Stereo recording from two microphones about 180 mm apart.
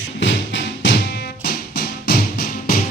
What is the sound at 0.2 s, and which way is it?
Music, 90° left.